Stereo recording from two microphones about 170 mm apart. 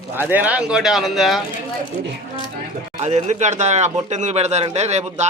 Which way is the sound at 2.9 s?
40° right (ahead or behind).